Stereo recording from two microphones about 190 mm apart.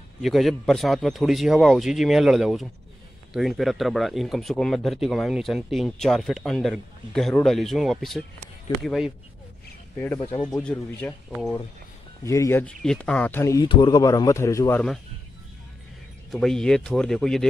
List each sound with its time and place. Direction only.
0.2 s speech: centre (ahead or behind)
9.9 s a man's voice: 10° left (ahead or behind)
10.3 s speech: 25° left (ahead or behind)
10.6 s a man's voice: 10° left (ahead or behind)
11.2 s speech: 5° right (ahead or behind)
12.3 s a man's voice: 15° left (ahead or behind)
16.3 s speech: 5° left (ahead or behind)